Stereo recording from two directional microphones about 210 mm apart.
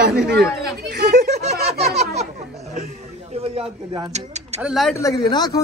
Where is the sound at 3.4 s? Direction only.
25° right (ahead or behind).